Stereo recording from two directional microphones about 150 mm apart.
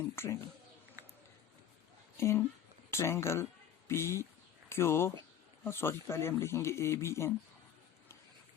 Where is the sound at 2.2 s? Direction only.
15° left (ahead or behind).